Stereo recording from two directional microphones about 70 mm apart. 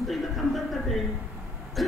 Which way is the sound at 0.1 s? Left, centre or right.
Centre.